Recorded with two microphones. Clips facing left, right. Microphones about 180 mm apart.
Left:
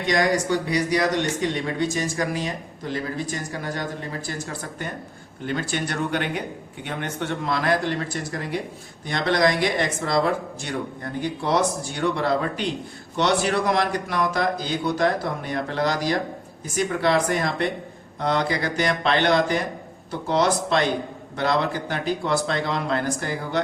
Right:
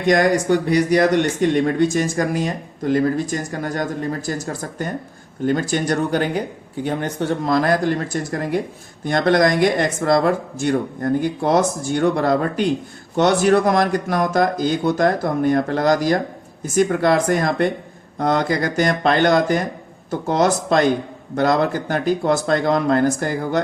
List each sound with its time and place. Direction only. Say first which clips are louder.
0.7 s speech: right 7 dB; 50° right (ahead or behind)